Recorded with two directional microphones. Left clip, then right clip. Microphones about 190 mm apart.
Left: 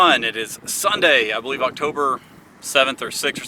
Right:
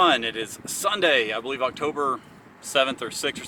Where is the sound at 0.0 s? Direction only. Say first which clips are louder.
Left 5 dB; 10° left (ahead or behind).